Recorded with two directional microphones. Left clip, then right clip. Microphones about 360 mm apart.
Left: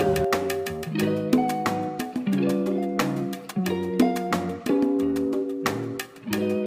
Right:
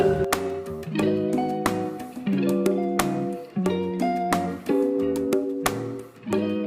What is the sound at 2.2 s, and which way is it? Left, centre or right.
Music, centre.